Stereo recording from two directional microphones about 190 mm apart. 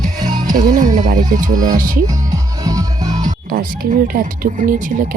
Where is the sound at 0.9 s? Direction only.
40° right (ahead or behind).